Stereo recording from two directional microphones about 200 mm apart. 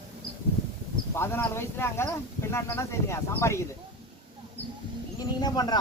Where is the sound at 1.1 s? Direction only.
10° left (ahead or behind).